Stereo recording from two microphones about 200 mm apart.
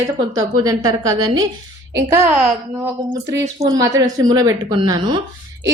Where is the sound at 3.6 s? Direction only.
20° right (ahead or behind).